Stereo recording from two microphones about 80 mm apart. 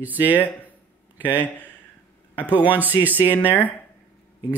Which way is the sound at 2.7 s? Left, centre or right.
Right.